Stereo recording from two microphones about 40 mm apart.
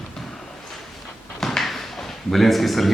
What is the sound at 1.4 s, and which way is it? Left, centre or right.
Drawer open or close, centre.